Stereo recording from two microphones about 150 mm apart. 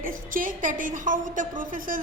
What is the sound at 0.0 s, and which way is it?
A woman's voice, 65° right (ahead or behind).